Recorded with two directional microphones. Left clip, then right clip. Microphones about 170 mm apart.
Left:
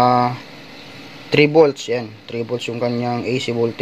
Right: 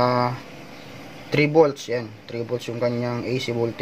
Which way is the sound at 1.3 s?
35° left (ahead or behind).